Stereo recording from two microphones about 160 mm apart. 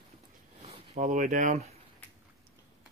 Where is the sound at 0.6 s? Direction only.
45° right (ahead or behind).